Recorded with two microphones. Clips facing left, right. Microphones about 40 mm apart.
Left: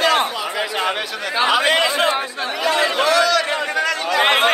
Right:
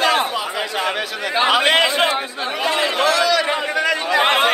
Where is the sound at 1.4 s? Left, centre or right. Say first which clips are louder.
Right 1 dB; right.